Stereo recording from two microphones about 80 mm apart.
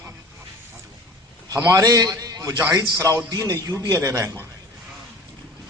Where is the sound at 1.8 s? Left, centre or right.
Right.